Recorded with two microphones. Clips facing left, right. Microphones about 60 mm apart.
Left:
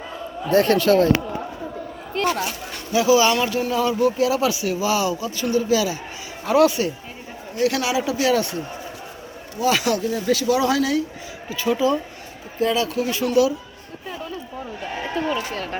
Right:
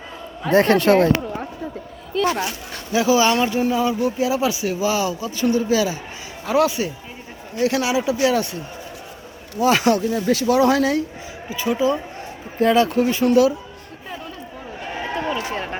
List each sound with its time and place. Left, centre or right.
0.5 s speech: right
2.9 s speech: right
6.4 s speech: centre
9.6 s speech: right
10.1 s speech: centre
10.3 s speech: right
11.4 s speech: centre
12.5 s speech: right
14.8 s run: centre
15.4 s speech: right